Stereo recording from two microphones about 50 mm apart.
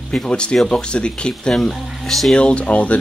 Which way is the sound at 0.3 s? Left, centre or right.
Centre.